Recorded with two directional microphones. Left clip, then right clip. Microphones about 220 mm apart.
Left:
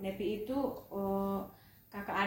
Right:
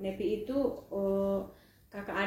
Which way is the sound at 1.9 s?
20° left (ahead or behind).